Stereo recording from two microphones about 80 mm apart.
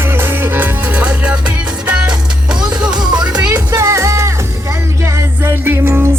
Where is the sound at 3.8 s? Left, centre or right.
Right.